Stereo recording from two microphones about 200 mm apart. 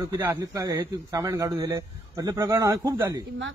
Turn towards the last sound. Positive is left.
turn(degrees=-15)  # may be behind; listen again after turning